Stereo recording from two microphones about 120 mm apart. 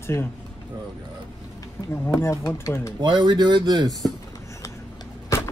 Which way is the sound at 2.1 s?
20° left (ahead or behind).